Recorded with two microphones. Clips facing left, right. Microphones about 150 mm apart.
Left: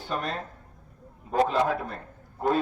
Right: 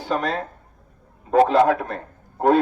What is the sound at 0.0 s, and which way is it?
A man's voice, 90° right.